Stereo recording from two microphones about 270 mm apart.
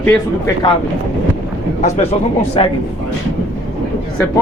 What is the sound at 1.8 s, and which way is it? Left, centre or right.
Speech, left.